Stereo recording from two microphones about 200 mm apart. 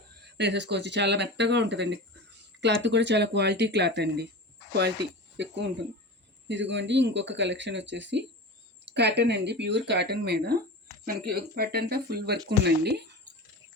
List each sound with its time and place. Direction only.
0.3 s speech: 60° right (ahead or behind)
5.4 s speech: 60° right (ahead or behind)